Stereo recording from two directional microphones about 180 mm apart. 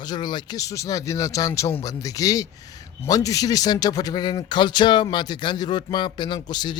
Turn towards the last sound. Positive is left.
turn(degrees=25)  # may be behind; listen again after turning